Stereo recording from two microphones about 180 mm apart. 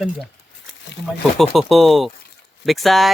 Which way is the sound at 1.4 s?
Centre (ahead or behind).